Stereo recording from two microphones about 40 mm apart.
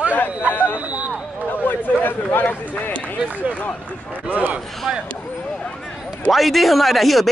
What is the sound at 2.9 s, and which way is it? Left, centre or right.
Speech, left.